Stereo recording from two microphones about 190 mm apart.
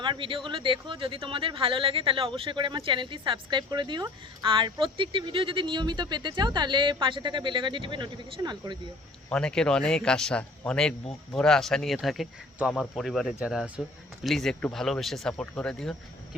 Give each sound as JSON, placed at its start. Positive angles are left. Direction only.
{"t": 0.0, "sound": "speech", "side_deg": -25}
{"t": 9.3, "sound": "speech", "side_deg": 5}